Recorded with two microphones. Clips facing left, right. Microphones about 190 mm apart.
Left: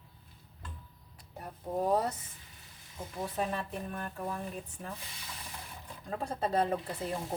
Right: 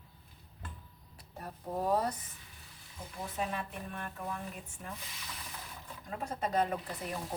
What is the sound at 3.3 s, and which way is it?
Music, 40° left (ahead or behind).